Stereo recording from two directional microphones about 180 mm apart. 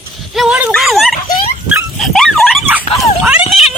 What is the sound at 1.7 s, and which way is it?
Dog, centre (ahead or behind).